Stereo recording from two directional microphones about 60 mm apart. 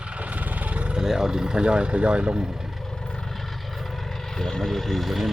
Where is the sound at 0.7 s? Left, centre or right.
Centre.